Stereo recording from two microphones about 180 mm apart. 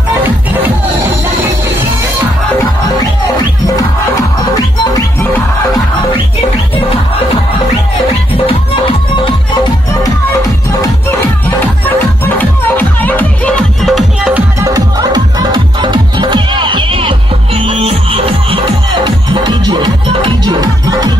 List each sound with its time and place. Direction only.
4.9 s music: 10° left (ahead or behind)
12.4 s music: 10° left (ahead or behind)
14.6 s music: 20° right (ahead or behind)